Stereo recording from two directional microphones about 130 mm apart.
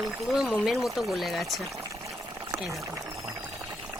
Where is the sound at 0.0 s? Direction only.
Centre (ahead or behind).